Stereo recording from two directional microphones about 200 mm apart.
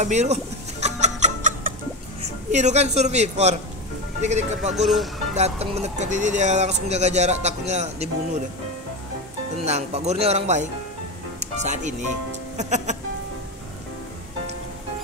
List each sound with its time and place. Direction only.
0.0 s music: 35° right (ahead or behind)
2.5 s speech: 35° right (ahead or behind)
9.7 s speech: 35° right (ahead or behind)